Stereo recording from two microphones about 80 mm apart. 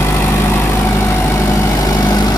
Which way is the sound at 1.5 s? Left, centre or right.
Left.